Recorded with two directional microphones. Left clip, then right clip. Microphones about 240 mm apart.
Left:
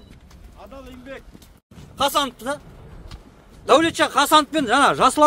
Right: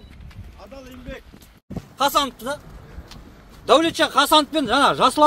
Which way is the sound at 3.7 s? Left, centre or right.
Centre.